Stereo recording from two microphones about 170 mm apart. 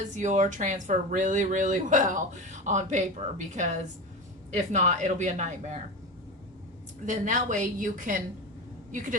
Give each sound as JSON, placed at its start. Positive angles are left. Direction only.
{"t": 0.0, "sound": "speech", "side_deg": -45}
{"t": 7.0, "sound": "speech", "side_deg": -50}